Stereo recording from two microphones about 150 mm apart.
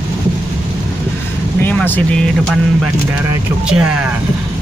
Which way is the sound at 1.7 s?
10° left (ahead or behind).